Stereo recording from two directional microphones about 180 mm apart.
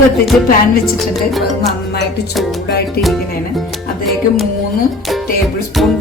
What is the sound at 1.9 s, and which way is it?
Music, 65° left (ahead or behind).